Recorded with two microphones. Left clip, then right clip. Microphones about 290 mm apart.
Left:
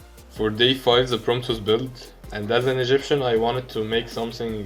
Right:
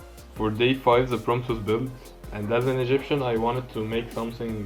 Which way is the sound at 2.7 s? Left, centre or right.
Left.